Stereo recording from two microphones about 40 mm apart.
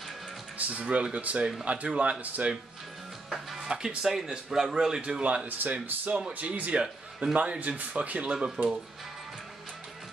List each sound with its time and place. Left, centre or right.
0.6 s a sound: right
0.8 s speech: right
2.4 s speech: right
3.3 s music: centre
3.6 s speech: centre
5.6 s speech: right
8.3 s speech: right